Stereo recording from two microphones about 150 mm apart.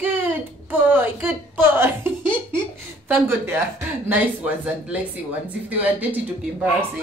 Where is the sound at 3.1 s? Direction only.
15° right (ahead or behind).